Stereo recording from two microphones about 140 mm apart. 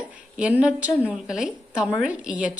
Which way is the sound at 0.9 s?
15° left (ahead or behind).